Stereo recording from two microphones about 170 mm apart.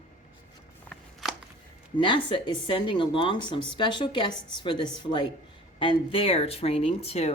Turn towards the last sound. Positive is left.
turn(degrees=35)  # may be behind; listen again after turning